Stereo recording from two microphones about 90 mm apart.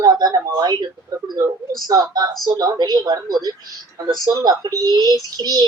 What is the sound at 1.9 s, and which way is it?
Speech, 45° right (ahead or behind).